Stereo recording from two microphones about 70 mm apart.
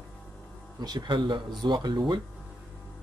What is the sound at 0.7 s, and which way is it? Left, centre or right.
Speech, right.